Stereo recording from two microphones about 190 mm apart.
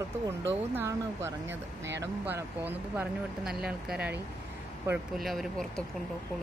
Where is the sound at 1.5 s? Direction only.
70° right (ahead or behind).